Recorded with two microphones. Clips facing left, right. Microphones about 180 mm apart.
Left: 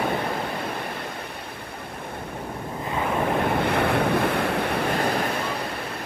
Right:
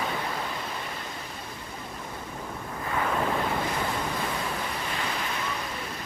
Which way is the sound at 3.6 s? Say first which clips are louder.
Left 8 dB; 65° left (ahead or behind).